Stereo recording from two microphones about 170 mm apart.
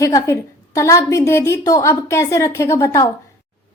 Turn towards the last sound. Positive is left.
turn(degrees=15)  # may be behind; listen again after turning